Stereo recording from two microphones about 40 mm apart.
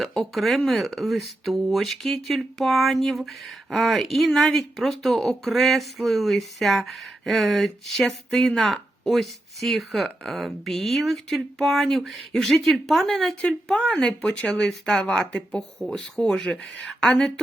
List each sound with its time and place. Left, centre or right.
0.2 s speech: centre
14.0 s speech: centre
14.3 s speech: left
15.1 s speech: centre